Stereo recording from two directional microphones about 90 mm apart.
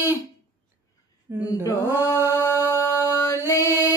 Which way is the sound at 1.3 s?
25° right (ahead or behind).